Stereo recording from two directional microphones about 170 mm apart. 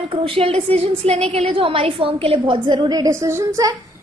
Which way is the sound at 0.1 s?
35° right (ahead or behind).